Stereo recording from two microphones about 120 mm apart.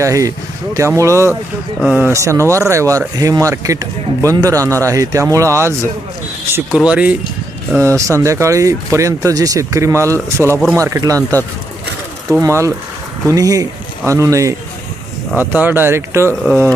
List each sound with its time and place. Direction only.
0.0 s speech: 25° right (ahead or behind)
1.8 s speech: 5° right (ahead or behind)
2.1 s speech: 25° right (ahead or behind)
6.7 s speech: 10° right (ahead or behind)
7.8 s speech: 25° right (ahead or behind)
12.4 s speech: 25° right (ahead or behind)
15.5 s speech: 15° right (ahead or behind)
16.5 s speech: 15° left (ahead or behind)